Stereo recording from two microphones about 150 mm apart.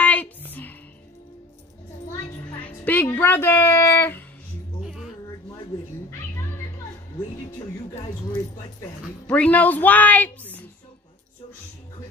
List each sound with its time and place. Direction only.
0.0 s music: 10° left (ahead or behind)
2.6 s music: 10° left (ahead or behind)
3.1 s speech: 15° left (ahead or behind)
4.8 s music: 5° right (ahead or behind)
9.3 s speech: 10° left (ahead or behind)